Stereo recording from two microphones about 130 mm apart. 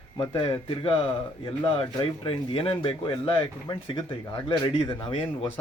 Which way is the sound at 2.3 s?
45° left (ahead or behind).